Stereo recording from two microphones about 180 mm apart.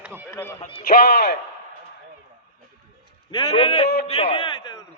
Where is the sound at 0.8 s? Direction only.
55° left (ahead or behind).